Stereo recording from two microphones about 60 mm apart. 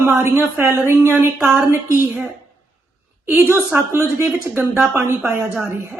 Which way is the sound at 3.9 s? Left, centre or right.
Right.